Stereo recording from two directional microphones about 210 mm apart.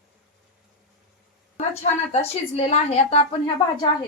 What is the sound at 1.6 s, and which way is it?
A woman's voice, 30° left (ahead or behind).